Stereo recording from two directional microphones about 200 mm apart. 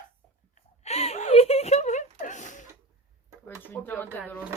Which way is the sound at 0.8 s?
30° left (ahead or behind).